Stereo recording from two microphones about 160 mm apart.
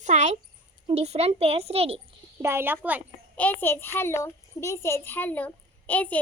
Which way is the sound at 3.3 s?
10° left (ahead or behind).